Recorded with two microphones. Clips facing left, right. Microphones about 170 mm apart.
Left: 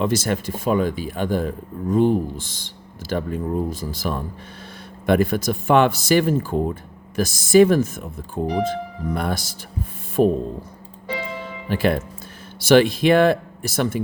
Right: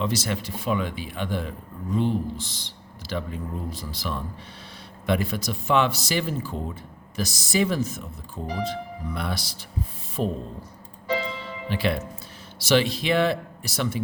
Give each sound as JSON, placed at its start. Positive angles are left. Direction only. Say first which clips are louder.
{"t": 0.0, "sound": "a man's voice", "louder": "left 6 dB", "side_deg": 50}
{"t": 10.2, "sound": "speech", "louder": "left 10 dB", "side_deg": 60}
{"t": 11.7, "sound": "a man's voice", "louder": "left 6 dB", "side_deg": 45}